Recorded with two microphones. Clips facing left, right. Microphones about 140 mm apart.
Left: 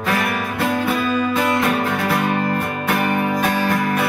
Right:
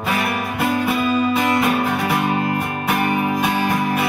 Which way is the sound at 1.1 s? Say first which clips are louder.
Right 1 dB; 10° right (ahead or behind).